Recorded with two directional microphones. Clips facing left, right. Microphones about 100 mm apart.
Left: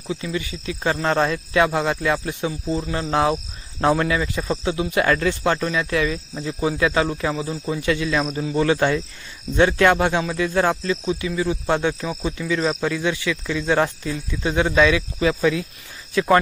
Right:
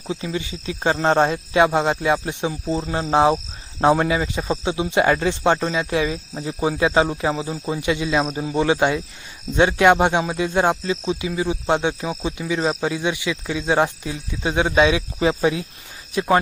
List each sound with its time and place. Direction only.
0.1 s speech: 25° right (ahead or behind)